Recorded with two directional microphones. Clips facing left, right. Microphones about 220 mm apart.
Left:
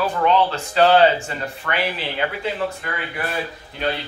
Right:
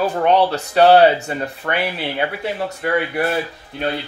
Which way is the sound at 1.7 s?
35° right (ahead or behind).